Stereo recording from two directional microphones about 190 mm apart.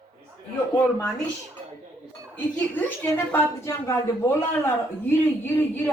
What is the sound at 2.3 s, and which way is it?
A woman's voice, 10° left (ahead or behind).